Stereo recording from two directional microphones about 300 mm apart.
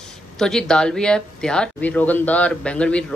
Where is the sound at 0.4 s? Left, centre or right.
Centre.